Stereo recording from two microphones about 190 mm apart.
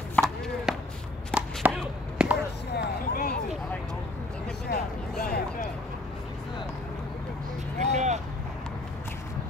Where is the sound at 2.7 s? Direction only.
55° left (ahead or behind).